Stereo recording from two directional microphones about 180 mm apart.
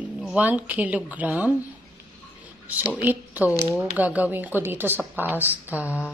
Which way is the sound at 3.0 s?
10° right (ahead or behind).